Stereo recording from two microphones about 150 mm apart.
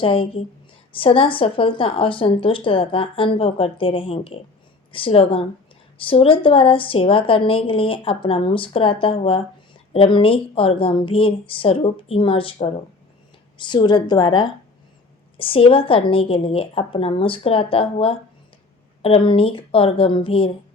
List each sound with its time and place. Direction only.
0.0 s a woman's voice: 35° left (ahead or behind)